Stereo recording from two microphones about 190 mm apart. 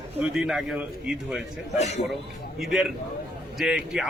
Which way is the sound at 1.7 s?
35° left (ahead or behind).